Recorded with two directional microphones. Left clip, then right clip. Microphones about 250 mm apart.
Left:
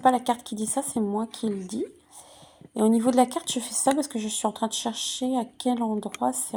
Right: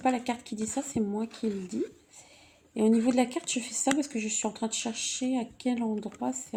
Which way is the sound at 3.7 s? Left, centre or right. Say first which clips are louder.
Left 5 dB; left.